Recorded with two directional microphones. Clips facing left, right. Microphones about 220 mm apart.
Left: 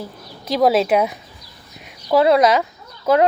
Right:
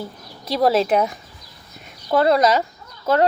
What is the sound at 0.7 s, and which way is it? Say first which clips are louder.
Speech: left 1 dB; 5° left (ahead or behind).